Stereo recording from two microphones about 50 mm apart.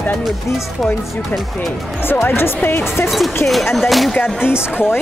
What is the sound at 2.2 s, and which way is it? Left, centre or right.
Speech, left.